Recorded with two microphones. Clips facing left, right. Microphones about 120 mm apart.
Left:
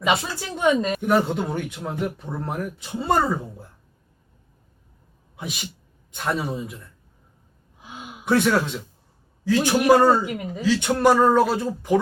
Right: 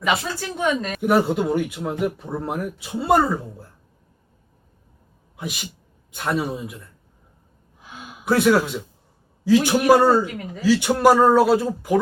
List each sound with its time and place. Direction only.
0.0 s speech: 15° left (ahead or behind)
1.0 s speech: 5° right (ahead or behind)
5.4 s speech: centre (ahead or behind)
8.2 s a man's voice: 5° right (ahead or behind)
10.2 s speech: 15° left (ahead or behind)
10.6 s speech: 5° right (ahead or behind)